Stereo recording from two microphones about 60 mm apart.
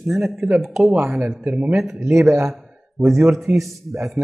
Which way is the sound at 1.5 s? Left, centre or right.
Centre.